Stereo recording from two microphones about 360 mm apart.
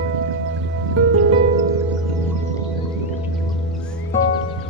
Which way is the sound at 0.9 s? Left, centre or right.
Right.